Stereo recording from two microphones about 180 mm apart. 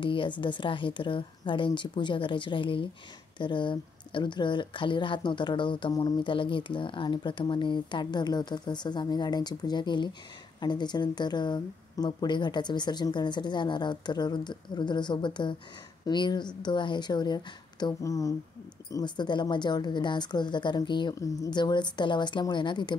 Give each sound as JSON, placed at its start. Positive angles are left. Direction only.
{"t": 0.0, "sound": "speech", "side_deg": 30}